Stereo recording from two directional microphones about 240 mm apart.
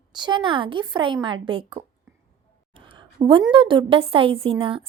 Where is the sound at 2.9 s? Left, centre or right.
Right.